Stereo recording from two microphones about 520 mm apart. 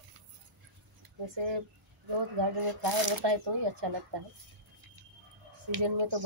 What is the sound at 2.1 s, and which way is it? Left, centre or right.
A woman's voice, right.